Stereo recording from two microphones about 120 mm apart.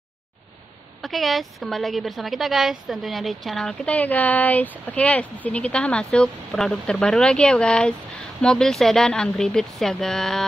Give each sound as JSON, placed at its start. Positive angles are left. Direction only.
{"t": 1.0, "sound": "a woman's voice", "side_deg": 0}